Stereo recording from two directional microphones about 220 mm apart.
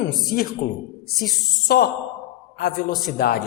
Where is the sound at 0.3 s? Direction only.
40° left (ahead or behind).